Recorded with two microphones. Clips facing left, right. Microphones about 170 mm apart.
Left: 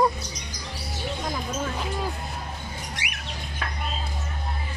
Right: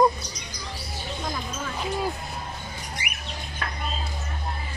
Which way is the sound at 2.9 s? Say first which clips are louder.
Even; 90° left.